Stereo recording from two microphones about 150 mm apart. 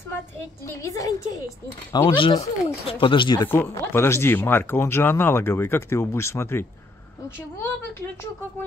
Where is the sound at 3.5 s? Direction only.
15° left (ahead or behind).